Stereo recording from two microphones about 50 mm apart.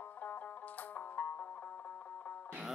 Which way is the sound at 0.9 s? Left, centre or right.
Left.